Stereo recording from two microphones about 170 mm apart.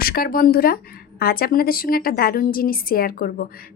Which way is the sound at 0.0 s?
60° left (ahead or behind).